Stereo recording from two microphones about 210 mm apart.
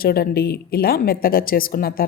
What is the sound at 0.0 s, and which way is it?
A woman's voice, 45° left (ahead or behind).